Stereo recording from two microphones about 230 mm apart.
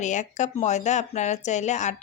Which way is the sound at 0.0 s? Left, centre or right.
Left.